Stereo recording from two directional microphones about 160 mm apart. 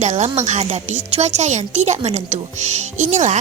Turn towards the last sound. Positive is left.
turn(degrees=-45)  # may be behind; listen again after turning